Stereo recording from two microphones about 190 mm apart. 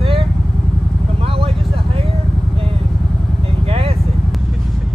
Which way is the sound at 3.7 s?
30° right (ahead or behind).